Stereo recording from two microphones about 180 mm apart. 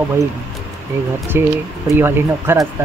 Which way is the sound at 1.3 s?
10° right (ahead or behind).